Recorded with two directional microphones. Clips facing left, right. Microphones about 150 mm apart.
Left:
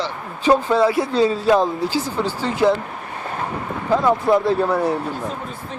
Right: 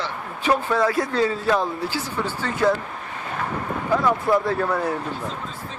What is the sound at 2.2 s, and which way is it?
Speech, 35° left (ahead or behind).